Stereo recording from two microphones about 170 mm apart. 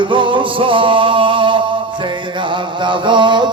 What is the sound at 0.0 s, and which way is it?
Music, 30° right (ahead or behind).